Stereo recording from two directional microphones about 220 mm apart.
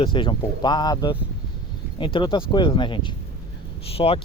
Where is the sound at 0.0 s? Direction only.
20° left (ahead or behind).